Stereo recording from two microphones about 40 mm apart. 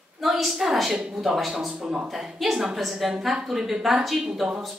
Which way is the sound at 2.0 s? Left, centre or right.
Centre.